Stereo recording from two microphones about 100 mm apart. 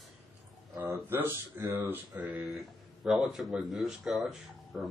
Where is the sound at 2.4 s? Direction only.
Centre (ahead or behind).